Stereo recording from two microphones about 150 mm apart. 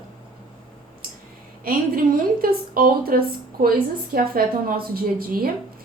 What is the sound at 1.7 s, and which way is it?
A woman's voice, 75° right (ahead or behind).